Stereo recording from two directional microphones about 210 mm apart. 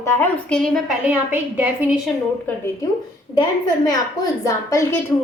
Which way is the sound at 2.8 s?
15° left (ahead or behind).